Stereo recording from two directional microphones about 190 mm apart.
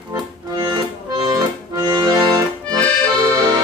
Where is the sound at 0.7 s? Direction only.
20° right (ahead or behind).